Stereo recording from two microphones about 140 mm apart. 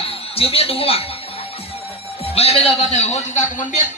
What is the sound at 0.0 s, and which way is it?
A woman's voice, 45° left (ahead or behind).